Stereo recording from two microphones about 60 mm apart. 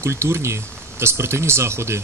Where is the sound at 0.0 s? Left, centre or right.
Right.